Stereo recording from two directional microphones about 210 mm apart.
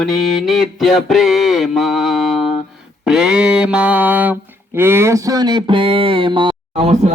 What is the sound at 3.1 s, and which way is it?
Music, 5° right (ahead or behind).